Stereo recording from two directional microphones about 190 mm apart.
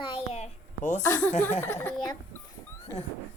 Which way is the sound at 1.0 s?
15° left (ahead or behind).